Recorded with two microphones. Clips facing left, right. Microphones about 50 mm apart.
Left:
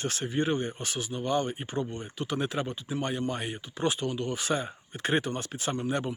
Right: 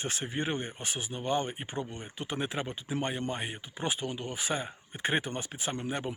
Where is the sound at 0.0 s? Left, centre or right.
Right.